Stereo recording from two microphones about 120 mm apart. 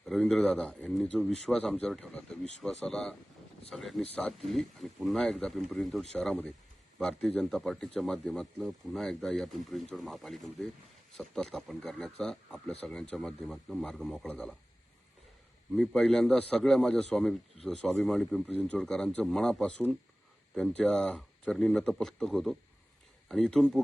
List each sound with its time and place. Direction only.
0.0 s speech: centre (ahead or behind)
15.7 s speech: 5° left (ahead or behind)